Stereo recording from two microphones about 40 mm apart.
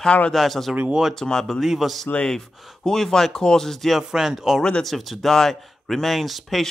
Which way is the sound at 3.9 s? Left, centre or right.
Centre.